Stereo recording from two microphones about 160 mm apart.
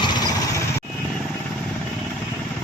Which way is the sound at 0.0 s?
25° left (ahead or behind).